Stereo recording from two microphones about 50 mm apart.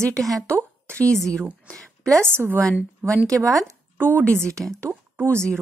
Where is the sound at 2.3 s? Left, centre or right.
Right.